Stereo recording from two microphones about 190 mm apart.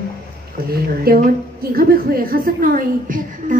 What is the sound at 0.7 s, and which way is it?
A woman's voice, 55° right (ahead or behind).